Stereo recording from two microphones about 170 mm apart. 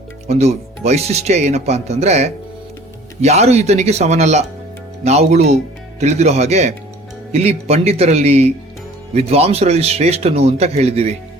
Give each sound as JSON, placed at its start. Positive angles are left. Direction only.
{"t": 0.3, "sound": "speech", "side_deg": -40}